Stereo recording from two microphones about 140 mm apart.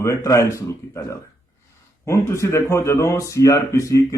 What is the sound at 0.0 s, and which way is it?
A man's voice, 25° left (ahead or behind).